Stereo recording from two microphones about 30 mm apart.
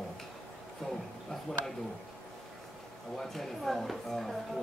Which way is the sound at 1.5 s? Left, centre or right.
Left.